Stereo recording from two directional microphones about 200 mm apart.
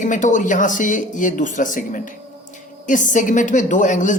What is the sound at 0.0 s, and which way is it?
A man's voice, 40° left (ahead or behind).